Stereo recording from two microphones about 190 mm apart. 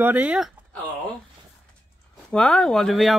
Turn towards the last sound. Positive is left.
turn(degrees=0)  # may be behind; listen again after turning